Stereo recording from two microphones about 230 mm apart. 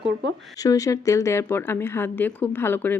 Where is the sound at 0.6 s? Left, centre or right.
Centre.